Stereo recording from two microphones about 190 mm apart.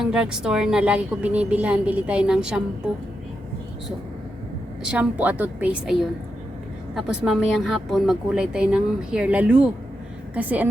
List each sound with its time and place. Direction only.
0.0 s speech: 5° right (ahead or behind)
4.9 s a woman's voice: 5° right (ahead or behind)